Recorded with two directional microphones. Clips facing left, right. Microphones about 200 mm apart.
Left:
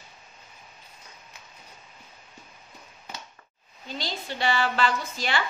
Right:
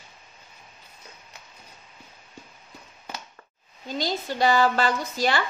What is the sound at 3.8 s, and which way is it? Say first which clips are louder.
Speech: right 6 dB; 45° right (ahead or behind).